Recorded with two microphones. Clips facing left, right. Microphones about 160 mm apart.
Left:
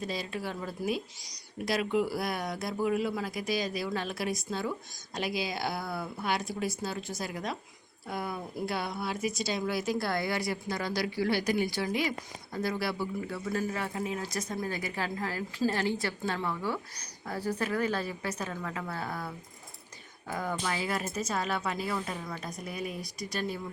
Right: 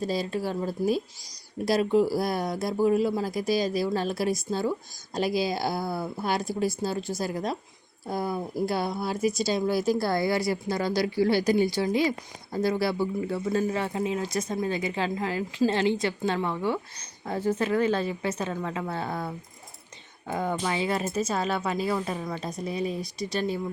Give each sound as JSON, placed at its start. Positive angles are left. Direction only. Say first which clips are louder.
{"t": 0.0, "sound": "speech", "louder": "right 7 dB", "side_deg": -35}